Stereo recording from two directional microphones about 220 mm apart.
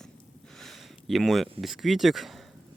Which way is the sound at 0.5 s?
Centre (ahead or behind).